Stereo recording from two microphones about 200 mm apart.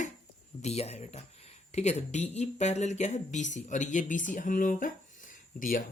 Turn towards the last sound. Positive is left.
turn(degrees=40)  # may be behind; listen again after turning